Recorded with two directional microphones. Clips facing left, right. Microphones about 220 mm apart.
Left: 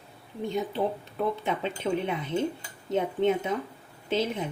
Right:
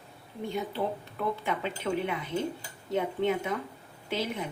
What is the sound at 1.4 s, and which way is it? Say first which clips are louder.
Speech: left 2 dB; 20° left (ahead or behind).